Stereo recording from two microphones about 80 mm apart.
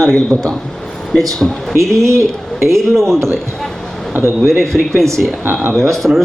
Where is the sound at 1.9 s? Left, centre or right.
Right.